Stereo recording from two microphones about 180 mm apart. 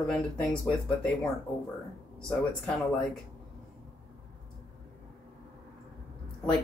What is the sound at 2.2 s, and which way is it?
Speech, 5° left (ahead or behind).